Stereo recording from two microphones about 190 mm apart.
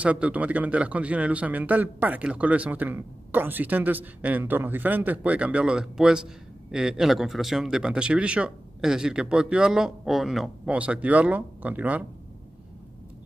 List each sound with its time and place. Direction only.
0.0 s speech: 5° right (ahead or behind)